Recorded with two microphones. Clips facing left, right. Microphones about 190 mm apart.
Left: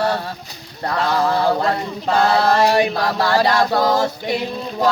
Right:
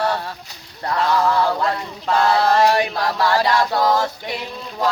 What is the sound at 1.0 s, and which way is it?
Chant, 30° left (ahead or behind).